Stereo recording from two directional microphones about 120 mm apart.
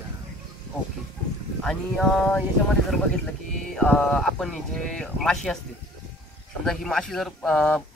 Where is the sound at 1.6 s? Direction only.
5° left (ahead or behind).